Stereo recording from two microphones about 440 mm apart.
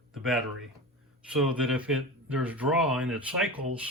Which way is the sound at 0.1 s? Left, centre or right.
Centre.